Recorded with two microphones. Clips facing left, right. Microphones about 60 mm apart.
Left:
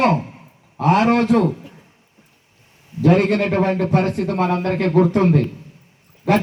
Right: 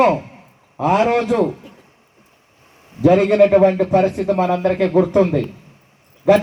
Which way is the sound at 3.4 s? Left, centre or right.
Left.